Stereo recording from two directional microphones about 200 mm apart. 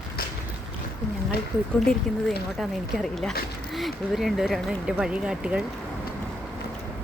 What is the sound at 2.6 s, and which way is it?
Speech, centre (ahead or behind).